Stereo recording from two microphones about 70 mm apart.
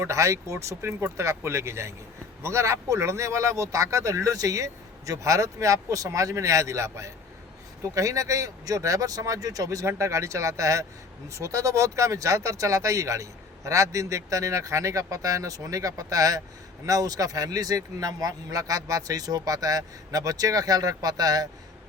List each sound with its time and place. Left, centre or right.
0.0 s speech: right